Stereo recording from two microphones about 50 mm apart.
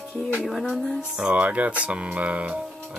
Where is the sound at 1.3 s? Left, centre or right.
Right.